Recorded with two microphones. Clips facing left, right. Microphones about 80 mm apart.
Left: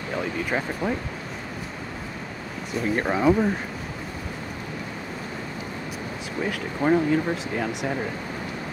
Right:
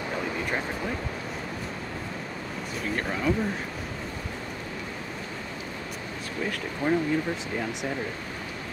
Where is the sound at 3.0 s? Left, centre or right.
Left.